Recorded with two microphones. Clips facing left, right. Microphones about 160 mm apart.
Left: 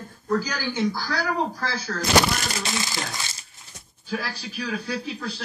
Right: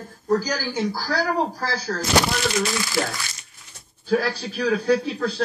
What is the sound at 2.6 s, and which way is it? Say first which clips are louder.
Speech: right 6 dB; 20° left (ahead or behind).